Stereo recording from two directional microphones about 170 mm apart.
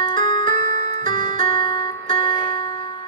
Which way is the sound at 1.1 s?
50° right (ahead or behind).